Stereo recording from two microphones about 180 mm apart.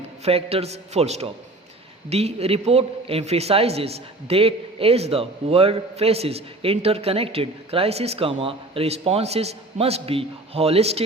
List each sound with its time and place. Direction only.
0.3 s a man's voice: 35° right (ahead or behind)